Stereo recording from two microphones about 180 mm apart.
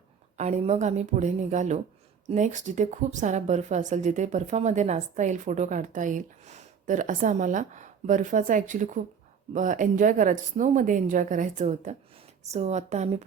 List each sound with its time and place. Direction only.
0.3 s a woman's voice: 40° right (ahead or behind)